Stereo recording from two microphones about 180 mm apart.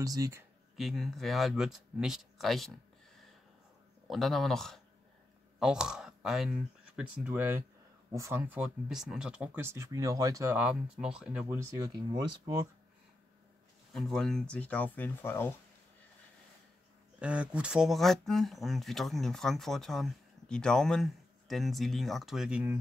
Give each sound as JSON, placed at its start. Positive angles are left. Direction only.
{"t": 0.0, "sound": "speech", "side_deg": -20}
{"t": 0.7, "sound": "speech", "side_deg": 0}
{"t": 4.1, "sound": "speech", "side_deg": 0}
{"t": 11.4, "sound": "speech", "side_deg": -20}
{"t": 13.9, "sound": "speech", "side_deg": 0}
{"t": 17.2, "sound": "speech", "side_deg": -5}